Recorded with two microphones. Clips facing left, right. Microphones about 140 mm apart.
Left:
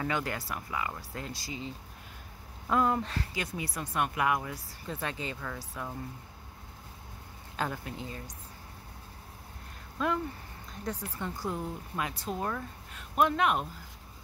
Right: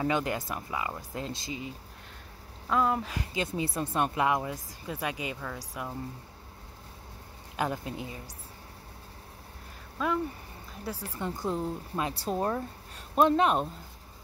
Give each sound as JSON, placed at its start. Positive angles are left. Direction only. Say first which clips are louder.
{"t": 0.0, "sound": "speech", "louder": "right 4 dB", "side_deg": -20}
{"t": 2.7, "sound": "speech", "louder": "even", "side_deg": 0}
{"t": 3.2, "sound": "speech", "louder": "right 4 dB", "side_deg": -25}
{"t": 4.8, "sound": "speech", "louder": "right 2 dB", "side_deg": -10}
{"t": 7.5, "sound": "speech", "louder": "right 3 dB", "side_deg": -20}
{"t": 9.9, "sound": "speech", "louder": "right 1 dB", "side_deg": 0}
{"t": 11.1, "sound": "speech", "louder": "right 3 dB", "side_deg": -20}